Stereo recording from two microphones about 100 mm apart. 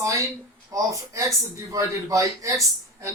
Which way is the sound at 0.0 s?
35° right (ahead or behind).